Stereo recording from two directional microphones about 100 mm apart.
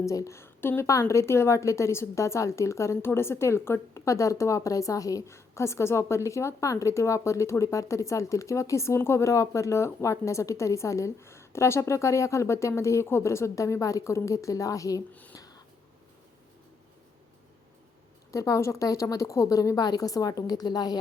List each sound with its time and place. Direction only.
0.0 s a woman's voice: 30° left (ahead or behind)
15.4 s a sound: 40° left (ahead or behind)
18.3 s a woman's voice: 30° left (ahead or behind)